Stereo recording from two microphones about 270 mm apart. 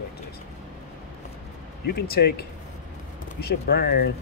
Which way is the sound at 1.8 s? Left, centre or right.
Left.